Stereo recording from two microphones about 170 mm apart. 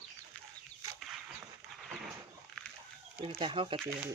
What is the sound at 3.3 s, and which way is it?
Speech, 30° right (ahead or behind).